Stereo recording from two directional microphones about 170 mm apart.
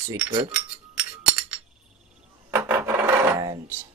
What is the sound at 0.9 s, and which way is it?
Music, 5° right (ahead or behind).